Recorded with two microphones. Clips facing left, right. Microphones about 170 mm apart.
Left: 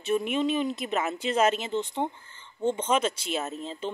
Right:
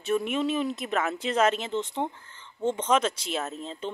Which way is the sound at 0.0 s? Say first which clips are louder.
Even; centre (ahead or behind).